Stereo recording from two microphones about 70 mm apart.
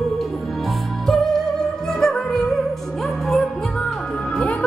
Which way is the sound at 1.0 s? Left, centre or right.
Centre.